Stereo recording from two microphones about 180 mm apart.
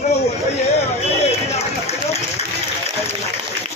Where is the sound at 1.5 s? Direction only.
35° left (ahead or behind).